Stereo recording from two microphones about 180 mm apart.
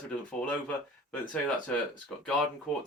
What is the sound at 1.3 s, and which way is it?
Speech, 10° left (ahead or behind).